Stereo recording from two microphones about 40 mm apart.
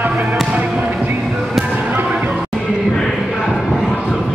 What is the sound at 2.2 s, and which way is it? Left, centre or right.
Music, right.